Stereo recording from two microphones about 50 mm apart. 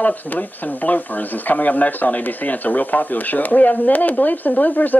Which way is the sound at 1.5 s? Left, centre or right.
Left.